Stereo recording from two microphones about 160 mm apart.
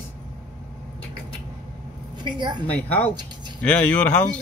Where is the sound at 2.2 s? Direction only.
30° right (ahead or behind).